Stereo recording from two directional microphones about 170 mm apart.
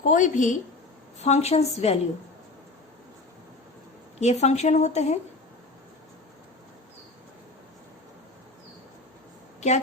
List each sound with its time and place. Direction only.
0.0 s a woman's voice: 50° left (ahead or behind)
4.2 s a woman's voice: 40° left (ahead or behind)
9.6 s a woman's voice: 45° left (ahead or behind)